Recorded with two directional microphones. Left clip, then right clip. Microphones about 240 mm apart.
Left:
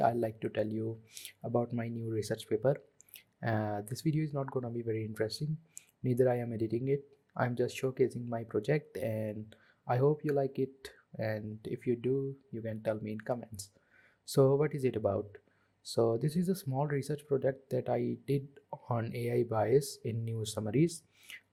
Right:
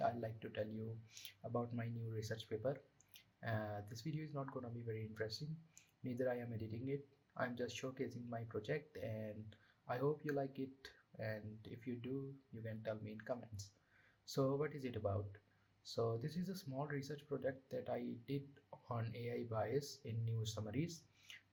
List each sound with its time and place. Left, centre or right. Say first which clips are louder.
0.0 s speech: left 11 dB; left